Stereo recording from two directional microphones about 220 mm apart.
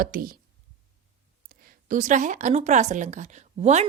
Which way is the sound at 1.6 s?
35° right (ahead or behind).